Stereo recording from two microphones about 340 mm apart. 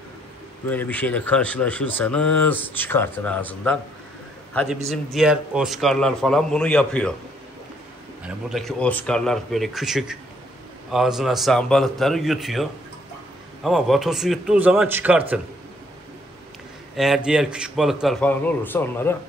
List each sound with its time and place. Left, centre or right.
0.7 s a man's voice: centre
8.2 s a man's voice: centre
13.7 s a man's voice: centre
16.9 s a man's voice: centre